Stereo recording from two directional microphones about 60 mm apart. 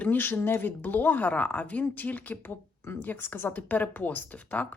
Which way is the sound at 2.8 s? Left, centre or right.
Left.